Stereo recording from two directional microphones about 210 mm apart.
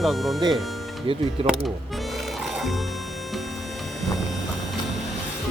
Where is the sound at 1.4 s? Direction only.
30° right (ahead or behind).